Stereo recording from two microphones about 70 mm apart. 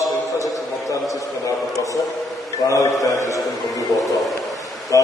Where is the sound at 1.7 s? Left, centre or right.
Left.